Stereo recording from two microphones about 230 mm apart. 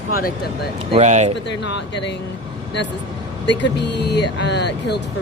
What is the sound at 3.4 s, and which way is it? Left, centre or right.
Speech, left.